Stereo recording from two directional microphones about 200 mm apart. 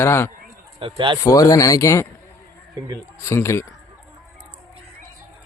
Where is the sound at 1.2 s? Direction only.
15° left (ahead or behind).